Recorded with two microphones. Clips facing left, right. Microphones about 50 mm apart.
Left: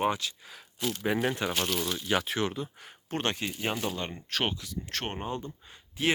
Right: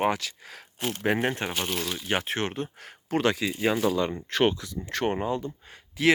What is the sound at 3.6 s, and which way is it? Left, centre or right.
Speech, right.